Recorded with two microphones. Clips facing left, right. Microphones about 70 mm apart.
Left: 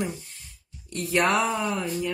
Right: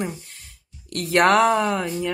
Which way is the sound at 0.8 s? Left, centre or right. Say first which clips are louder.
Right 6 dB; right.